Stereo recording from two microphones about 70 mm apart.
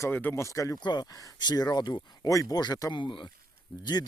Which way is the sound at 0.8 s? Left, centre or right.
Left.